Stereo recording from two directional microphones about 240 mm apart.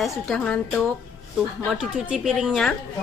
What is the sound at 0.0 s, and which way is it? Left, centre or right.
A woman's voice, centre.